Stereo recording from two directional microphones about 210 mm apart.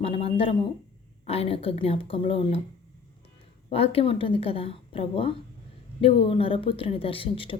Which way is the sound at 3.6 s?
25° left (ahead or behind).